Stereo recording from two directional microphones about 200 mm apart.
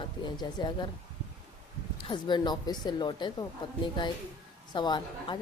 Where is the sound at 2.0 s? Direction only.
25° left (ahead or behind).